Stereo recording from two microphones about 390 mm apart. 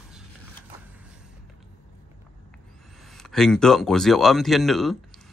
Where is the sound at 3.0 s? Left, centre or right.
Centre.